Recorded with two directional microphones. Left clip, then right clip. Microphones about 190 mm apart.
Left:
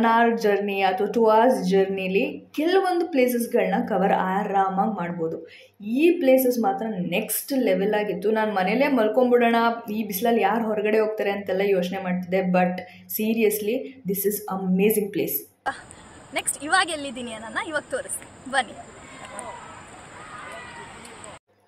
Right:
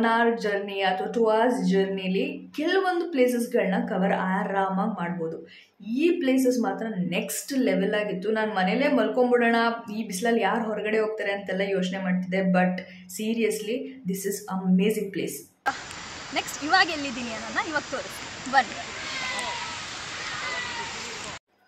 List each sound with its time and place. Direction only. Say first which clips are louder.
0.0 s a woman's voice: left 3 dB; 15° left (ahead or behind)
16.3 s speech: even; 30° left (ahead or behind)